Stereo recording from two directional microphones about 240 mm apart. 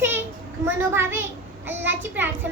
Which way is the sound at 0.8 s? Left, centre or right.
Centre.